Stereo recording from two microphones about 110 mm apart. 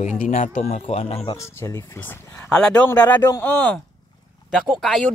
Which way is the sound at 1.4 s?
25° left (ahead or behind).